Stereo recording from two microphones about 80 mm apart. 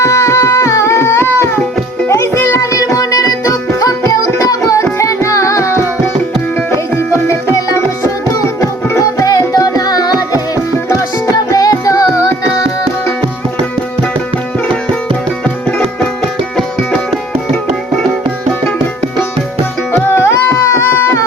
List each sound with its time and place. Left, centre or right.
0.0 s carnatic music: left
2.0 s music: left
8.9 s music: left
11.5 s music: left
16.6 s music: centre
19.9 s music: left